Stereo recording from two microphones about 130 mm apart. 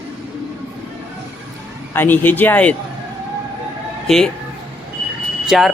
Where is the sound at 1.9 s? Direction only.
15° left (ahead or behind).